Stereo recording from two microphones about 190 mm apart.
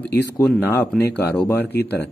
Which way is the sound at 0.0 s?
5° left (ahead or behind).